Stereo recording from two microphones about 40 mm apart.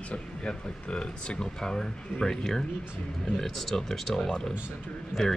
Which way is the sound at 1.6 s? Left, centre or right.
Centre.